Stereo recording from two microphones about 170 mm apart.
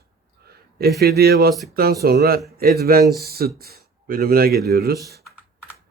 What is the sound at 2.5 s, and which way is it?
Mantra, 65° right (ahead or behind).